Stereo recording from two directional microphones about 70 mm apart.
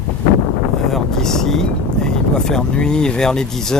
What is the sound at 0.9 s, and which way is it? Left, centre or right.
Vehicle, centre.